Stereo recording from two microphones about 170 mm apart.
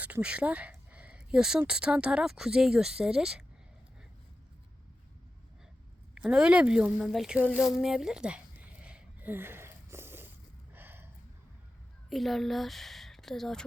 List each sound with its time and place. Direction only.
0.0 s speech: 5° right (ahead or behind)
6.1 s speech: 5° right (ahead or behind)
7.6 s a sound: centre (ahead or behind)
12.0 s speech: centre (ahead or behind)